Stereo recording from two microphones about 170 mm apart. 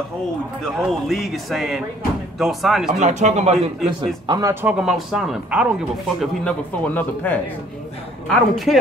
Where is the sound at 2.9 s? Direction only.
45° right (ahead or behind).